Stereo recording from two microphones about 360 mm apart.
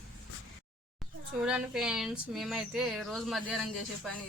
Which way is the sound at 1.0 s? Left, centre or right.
Centre.